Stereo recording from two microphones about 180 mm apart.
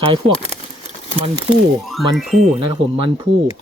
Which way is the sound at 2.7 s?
25° right (ahead or behind).